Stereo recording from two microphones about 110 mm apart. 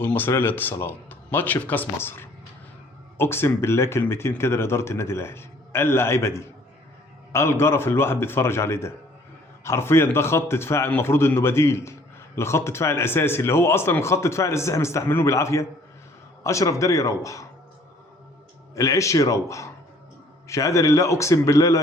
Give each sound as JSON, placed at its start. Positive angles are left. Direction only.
{"t": 0.0, "sound": "speech", "side_deg": 20}
{"t": 18.7, "sound": "speech", "side_deg": 30}